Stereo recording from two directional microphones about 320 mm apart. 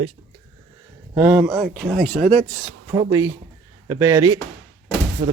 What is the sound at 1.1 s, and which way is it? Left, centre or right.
Speech, centre.